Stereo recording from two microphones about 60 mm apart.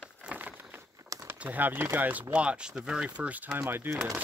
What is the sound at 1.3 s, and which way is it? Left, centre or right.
Speech, right.